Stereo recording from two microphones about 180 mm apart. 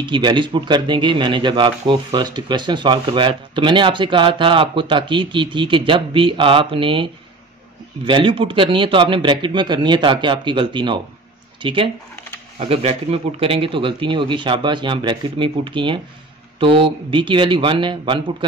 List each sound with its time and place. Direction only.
0.1 s speech: 25° right (ahead or behind)